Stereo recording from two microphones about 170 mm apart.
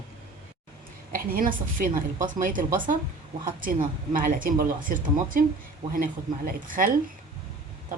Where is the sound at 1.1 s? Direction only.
55° right (ahead or behind).